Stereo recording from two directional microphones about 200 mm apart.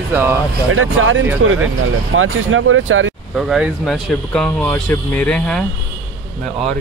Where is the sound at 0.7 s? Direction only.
75° right (ahead or behind).